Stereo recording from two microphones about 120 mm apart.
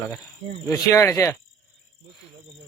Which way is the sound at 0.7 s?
25° left (ahead or behind).